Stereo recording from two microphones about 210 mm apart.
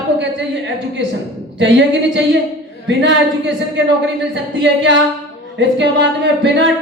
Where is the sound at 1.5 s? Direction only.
60° right (ahead or behind).